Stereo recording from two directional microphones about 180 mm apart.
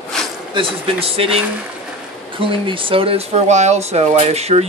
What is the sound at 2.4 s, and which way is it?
Speech, 30° right (ahead or behind).